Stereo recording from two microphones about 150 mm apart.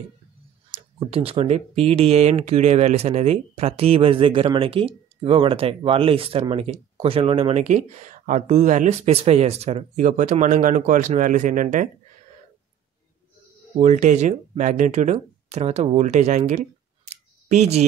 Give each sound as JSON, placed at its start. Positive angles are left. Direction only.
{"t": 0.7, "sound": "speech", "side_deg": -40}
{"t": 13.7, "sound": "speech", "side_deg": -55}